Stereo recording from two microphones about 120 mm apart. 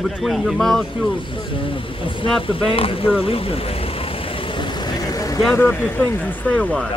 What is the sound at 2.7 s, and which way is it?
Vehicle, 50° left (ahead or behind).